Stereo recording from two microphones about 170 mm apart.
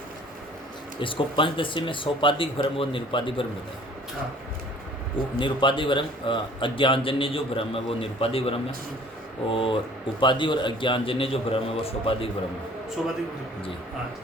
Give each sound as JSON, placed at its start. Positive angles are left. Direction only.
{"t": 0.9, "sound": "a man's voice", "side_deg": 30}
{"t": 5.4, "sound": "a man's voice", "side_deg": 30}